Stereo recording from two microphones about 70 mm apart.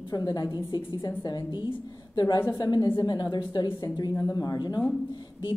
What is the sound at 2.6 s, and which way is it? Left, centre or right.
Speech, left.